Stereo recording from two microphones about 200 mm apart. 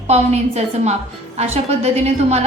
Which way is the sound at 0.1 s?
35° right (ahead or behind).